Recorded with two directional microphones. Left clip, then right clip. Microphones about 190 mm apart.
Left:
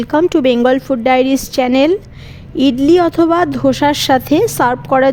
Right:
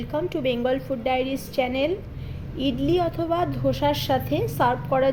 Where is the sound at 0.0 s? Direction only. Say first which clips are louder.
Left 14 dB; 60° left (ahead or behind).